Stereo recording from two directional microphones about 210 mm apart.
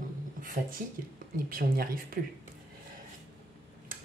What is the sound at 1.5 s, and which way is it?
Speech, 45° right (ahead or behind).